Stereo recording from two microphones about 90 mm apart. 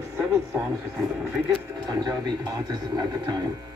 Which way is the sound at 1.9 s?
50° right (ahead or behind).